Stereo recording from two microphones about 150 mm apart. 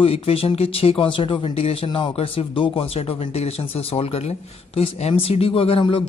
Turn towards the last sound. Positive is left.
turn(degrees=35)  # may be behind; listen again after turning